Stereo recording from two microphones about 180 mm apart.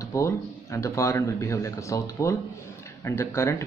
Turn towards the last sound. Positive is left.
turn(degrees=15)  # may be behind; listen again after turning